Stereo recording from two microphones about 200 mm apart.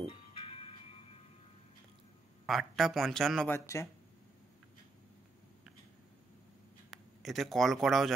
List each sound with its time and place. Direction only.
0.1 s music: 30° left (ahead or behind)
2.4 s speech: centre (ahead or behind)
6.9 s speech: centre (ahead or behind)